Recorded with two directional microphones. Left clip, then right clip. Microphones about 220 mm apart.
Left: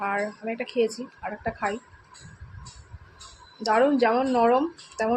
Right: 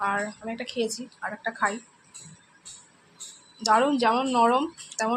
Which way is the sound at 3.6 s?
10° left (ahead or behind).